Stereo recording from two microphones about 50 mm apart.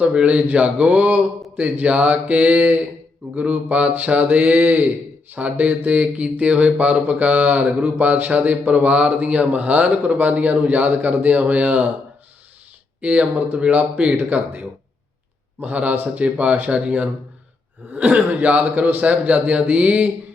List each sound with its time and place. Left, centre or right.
0.0 s a man's voice: right
7.8 s speech: right
8.0 s a man's voice: right
10.0 s speech: right
10.2 s a man's voice: right
13.0 s a man's voice: right
15.6 s a man's voice: right